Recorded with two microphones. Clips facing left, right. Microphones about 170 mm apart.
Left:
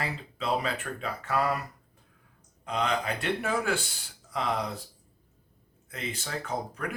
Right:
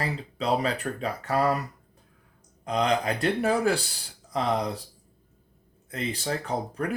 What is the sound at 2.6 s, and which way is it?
Speech, 40° right (ahead or behind).